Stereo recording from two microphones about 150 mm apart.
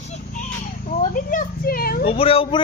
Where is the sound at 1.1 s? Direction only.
65° left (ahead or behind); by 2.1 s 80° left.